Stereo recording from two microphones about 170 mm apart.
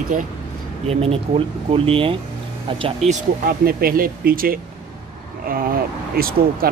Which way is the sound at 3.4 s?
60° right (ahead or behind).